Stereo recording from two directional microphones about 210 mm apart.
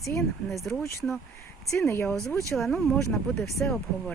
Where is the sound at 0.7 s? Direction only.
15° left (ahead or behind).